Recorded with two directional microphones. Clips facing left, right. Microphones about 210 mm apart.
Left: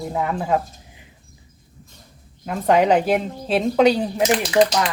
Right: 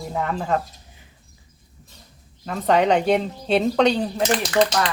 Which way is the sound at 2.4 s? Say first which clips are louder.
Left 2 dB; 10° left (ahead or behind).